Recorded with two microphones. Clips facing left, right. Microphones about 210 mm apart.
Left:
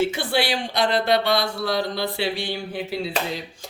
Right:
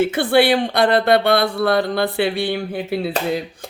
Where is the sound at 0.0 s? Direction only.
55° right (ahead or behind).